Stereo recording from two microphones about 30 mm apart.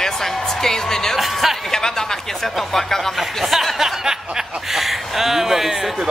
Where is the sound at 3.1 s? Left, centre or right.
Centre.